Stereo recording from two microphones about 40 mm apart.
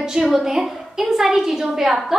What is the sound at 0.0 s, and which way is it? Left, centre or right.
A woman's voice, centre.